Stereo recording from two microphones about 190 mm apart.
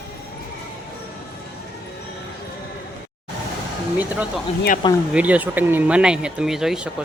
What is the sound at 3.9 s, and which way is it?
Speech, 5° right (ahead or behind).